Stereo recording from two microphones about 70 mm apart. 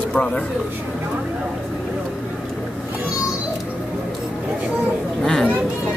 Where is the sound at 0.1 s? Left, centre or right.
Centre.